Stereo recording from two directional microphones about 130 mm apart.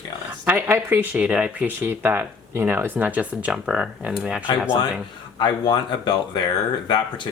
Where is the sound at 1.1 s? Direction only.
5° right (ahead or behind).